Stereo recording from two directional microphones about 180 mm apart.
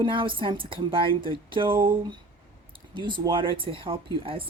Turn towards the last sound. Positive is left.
turn(degrees=-30)  # may be behind; listen again after turning